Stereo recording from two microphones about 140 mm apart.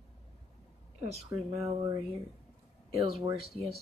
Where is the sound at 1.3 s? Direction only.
20° right (ahead or behind).